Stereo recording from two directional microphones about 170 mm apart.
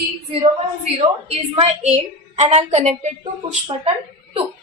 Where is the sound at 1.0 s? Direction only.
35° right (ahead or behind).